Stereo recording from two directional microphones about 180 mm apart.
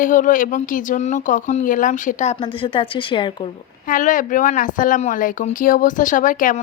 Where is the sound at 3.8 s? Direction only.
45° left (ahead or behind).